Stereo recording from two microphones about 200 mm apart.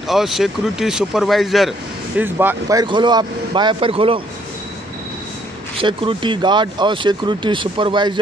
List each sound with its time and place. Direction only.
0.1 s speech: centre (ahead or behind); by 4.2 s 25° right (ahead or behind)
5.8 s speech: 25° right (ahead or behind)